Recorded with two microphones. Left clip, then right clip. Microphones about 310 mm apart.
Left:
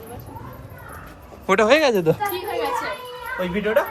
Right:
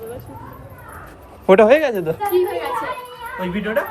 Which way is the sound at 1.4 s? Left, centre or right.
Centre.